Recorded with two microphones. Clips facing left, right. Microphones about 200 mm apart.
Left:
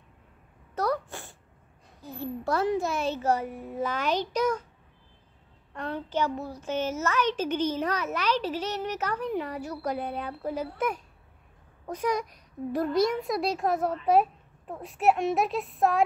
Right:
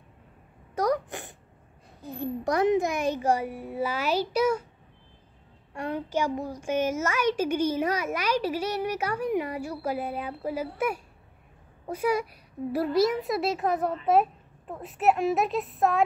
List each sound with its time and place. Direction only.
0.7 s sneeze: 15° right (ahead or behind)
2.0 s a child's voice: 15° right (ahead or behind)
5.8 s a child's voice: 10° right (ahead or behind)